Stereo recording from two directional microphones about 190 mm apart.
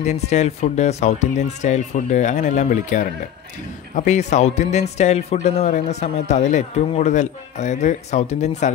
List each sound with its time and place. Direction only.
0.0 s speech: 35° left (ahead or behind)